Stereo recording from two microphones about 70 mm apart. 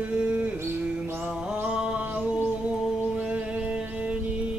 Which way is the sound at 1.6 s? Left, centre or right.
Centre.